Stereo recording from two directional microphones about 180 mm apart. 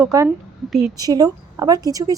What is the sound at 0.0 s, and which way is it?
A woman's voice, 15° right (ahead or behind).